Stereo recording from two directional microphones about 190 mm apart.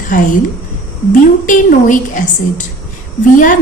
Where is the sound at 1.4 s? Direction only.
45° left (ahead or behind).